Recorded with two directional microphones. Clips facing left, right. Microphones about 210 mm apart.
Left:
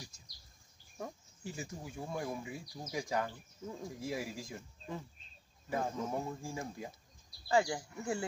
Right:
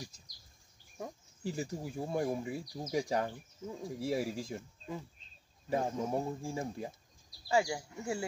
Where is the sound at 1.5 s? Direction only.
35° right (ahead or behind).